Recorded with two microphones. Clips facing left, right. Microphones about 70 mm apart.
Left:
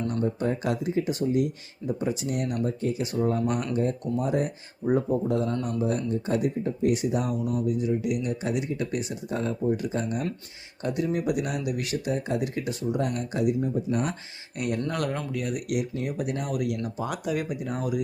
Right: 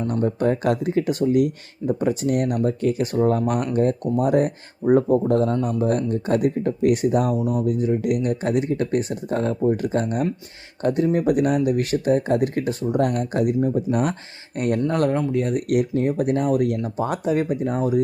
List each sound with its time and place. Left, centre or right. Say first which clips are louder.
0.1 s speech: right 6 dB; right
1.2 s speech: right 7 dB; right
1.9 s speech: right 7 dB; right
10.8 s speech: right 7 dB; right